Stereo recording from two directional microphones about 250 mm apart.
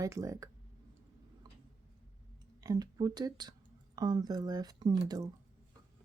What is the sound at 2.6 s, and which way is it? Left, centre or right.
Speech, centre.